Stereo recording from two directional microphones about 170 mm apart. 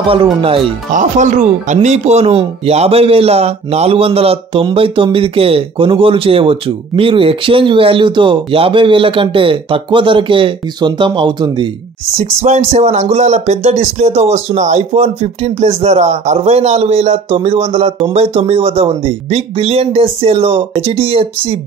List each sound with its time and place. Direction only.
0.1 s speech: 30° right (ahead or behind)
0.9 s speech: 45° right (ahead or behind); by 11.7 s 25° right (ahead or behind)
12.4 s speech: 40° right (ahead or behind)